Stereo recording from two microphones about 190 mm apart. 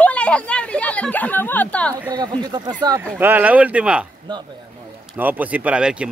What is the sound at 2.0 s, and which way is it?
Speech, 20° right (ahead or behind).